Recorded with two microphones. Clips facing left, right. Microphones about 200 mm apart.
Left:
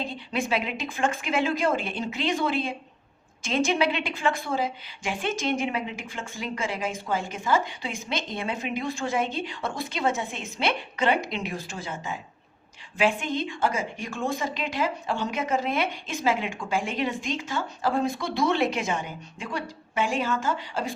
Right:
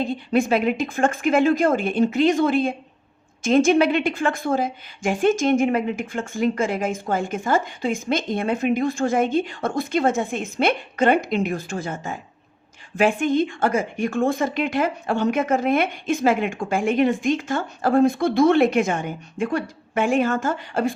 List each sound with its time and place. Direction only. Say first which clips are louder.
0.0 s a woman's voice: right 9 dB; 50° right (ahead or behind)